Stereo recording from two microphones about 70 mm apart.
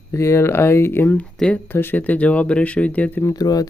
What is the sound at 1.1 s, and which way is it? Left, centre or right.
Speech, centre.